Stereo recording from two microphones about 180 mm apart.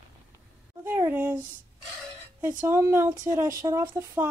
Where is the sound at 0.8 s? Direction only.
15° right (ahead or behind).